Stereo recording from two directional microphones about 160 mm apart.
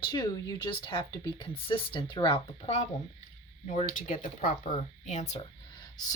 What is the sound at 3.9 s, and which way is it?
Speech, 55° left (ahead or behind).